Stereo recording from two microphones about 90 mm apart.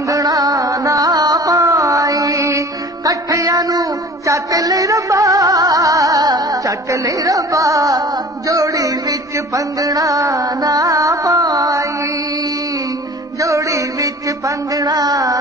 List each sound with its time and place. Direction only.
0.1 s music: 40° right (ahead or behind)
8.5 s carnatic music: 40° right (ahead or behind)
9.8 s music: 40° right (ahead or behind)
13.4 s music: 35° right (ahead or behind)
14.8 s carnatic music: 45° right (ahead or behind)